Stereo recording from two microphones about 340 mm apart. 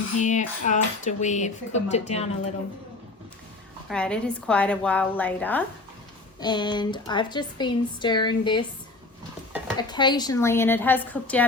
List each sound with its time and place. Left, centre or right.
0.2 s speech: left
3.8 s a woman's voice: centre
9.7 s speech: centre